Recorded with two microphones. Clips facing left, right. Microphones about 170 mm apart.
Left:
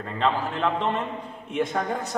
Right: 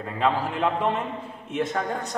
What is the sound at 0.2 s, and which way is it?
A man's voice, 10° right (ahead or behind).